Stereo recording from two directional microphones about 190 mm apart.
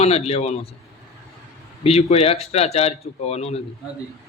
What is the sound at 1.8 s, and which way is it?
A man's voice, 30° left (ahead or behind).